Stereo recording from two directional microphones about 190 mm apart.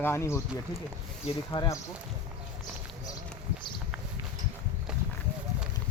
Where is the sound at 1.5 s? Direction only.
20° left (ahead or behind).